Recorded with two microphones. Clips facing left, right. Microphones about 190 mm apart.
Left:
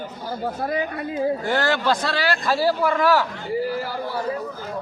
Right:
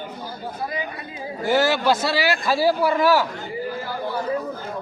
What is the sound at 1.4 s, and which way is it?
A man's voice, 5° right (ahead or behind).